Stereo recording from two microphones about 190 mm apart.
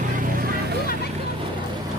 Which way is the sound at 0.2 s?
50° right (ahead or behind).